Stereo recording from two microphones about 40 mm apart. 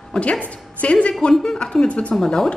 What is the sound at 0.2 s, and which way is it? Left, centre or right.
A woman's voice, left.